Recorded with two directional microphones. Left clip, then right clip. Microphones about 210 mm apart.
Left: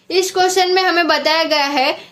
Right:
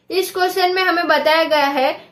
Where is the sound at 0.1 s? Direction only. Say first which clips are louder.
Left 3 dB; 35° left (ahead or behind).